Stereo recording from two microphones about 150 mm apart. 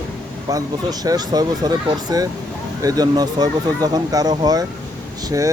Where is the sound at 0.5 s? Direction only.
25° right (ahead or behind).